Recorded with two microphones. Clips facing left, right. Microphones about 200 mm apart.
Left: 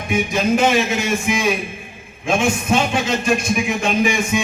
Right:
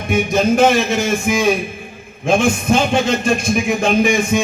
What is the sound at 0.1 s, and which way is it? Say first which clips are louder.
A man's voice: right 3 dB; 40° right (ahead or behind).